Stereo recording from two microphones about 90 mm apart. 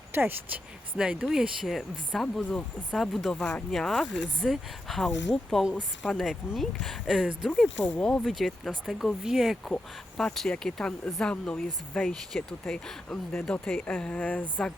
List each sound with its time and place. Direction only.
0.1 s speech: 25° right (ahead or behind)
0.9 s speech: 10° right (ahead or behind); by 8.3 s 10° left (ahead or behind)
8.3 s speech: centre (ahead or behind); by 14.5 s 15° left (ahead or behind)